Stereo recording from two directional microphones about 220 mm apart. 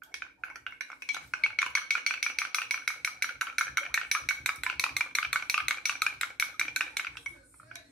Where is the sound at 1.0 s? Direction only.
Centre (ahead or behind).